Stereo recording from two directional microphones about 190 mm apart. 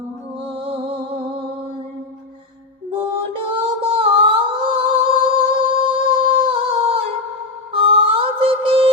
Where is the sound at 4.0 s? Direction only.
30° right (ahead or behind).